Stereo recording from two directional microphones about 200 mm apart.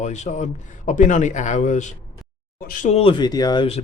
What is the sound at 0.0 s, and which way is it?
A man's voice, 35° left (ahead or behind).